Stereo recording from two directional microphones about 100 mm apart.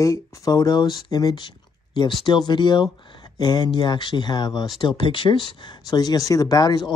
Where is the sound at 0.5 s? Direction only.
45° left (ahead or behind).